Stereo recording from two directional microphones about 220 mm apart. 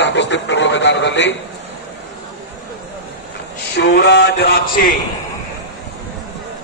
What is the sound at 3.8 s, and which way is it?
A man's voice, 50° left (ahead or behind).